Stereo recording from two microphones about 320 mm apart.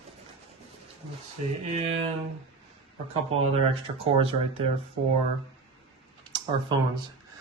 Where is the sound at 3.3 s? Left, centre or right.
Centre.